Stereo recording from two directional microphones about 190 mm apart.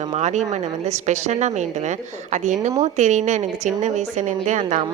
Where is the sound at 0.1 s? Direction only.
35° right (ahead or behind).